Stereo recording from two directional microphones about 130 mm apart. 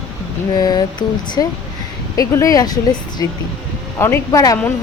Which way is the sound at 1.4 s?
25° left (ahead or behind).